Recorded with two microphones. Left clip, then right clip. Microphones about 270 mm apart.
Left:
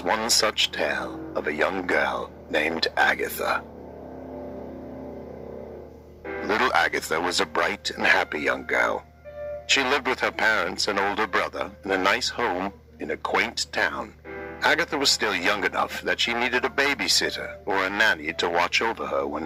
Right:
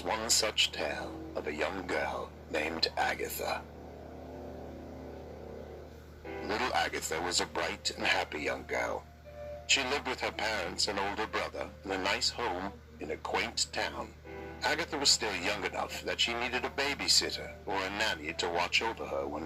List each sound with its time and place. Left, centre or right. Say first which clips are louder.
0.0 s speech: left 9 dB; left
0.5 s speech: left 5 dB; left
0.8 s speech: left 9 dB; left
6.2 s speech: left 10 dB; left